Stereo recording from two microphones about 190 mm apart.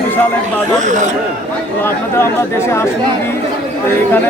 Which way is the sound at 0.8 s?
40° right (ahead or behind).